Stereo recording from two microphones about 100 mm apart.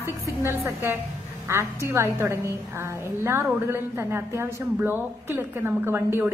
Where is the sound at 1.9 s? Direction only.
25° right (ahead or behind).